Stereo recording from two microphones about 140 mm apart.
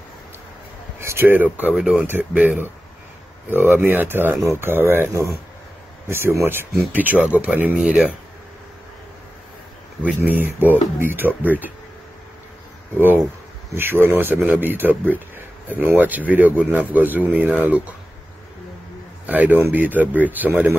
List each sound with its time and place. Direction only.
0.9 s speech: 15° right (ahead or behind)
10.0 s speech: 10° right (ahead or behind)
12.9 s speech: 15° right (ahead or behind)
19.2 s a man's voice: 10° right (ahead or behind)